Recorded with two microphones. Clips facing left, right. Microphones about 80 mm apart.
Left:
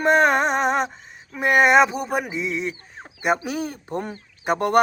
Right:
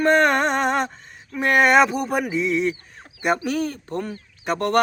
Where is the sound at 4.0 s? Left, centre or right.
Left.